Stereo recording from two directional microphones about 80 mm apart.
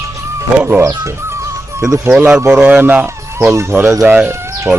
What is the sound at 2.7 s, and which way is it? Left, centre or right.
Speech, right.